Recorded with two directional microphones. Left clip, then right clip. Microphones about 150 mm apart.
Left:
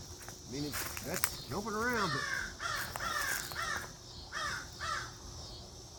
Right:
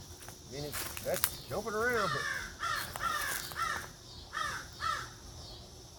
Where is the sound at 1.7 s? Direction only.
30° right (ahead or behind).